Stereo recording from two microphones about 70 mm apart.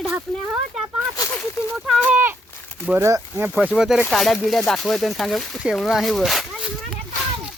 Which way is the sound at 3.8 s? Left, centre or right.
Centre.